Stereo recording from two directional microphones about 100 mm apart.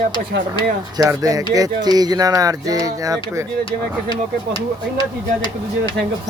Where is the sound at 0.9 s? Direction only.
35° right (ahead or behind).